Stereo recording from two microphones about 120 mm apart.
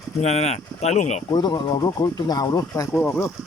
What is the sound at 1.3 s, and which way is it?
Speech, 35° left (ahead or behind).